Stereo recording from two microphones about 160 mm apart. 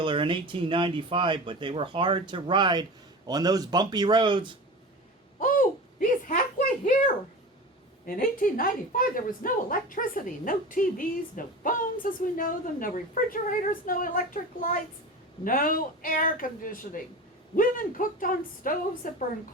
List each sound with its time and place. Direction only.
0.0 s speech: 30° right (ahead or behind)
5.4 s a sound: 55° left (ahead or behind)
8.0 s a woman's voice: 60° left (ahead or behind)
15.4 s a woman's voice: 60° left (ahead or behind)